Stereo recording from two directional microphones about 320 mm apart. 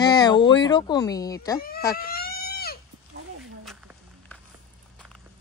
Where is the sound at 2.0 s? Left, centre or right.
Left.